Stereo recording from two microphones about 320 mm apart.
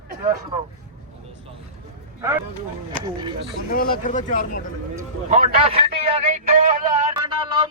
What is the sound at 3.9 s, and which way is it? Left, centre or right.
Speech, left.